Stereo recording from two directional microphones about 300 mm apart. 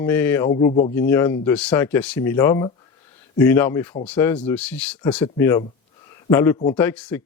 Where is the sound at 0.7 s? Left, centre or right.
Left.